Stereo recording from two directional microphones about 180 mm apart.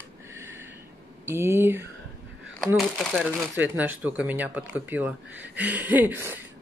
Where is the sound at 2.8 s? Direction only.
5° left (ahead or behind).